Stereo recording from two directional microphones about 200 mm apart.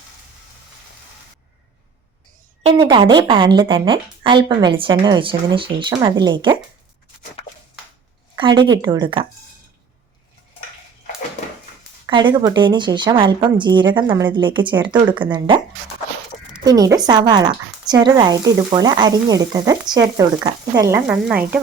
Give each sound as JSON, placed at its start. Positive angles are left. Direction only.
{"t": 2.6, "sound": "a woman's voice", "side_deg": -30}
{"t": 8.4, "sound": "a woman's voice", "side_deg": -25}
{"t": 12.0, "sound": "a woman's voice", "side_deg": -20}
{"t": 16.6, "sound": "a woman's voice", "side_deg": -20}